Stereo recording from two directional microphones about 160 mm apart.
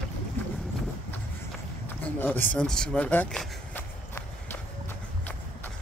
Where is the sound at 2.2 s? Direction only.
10° left (ahead or behind).